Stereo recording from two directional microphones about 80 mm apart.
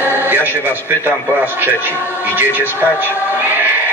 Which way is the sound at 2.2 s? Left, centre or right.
Right.